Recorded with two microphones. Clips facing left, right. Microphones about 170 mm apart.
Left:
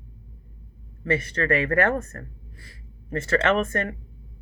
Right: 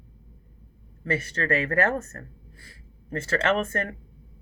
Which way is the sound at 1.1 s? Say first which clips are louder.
Left 3 dB; 30° right (ahead or behind).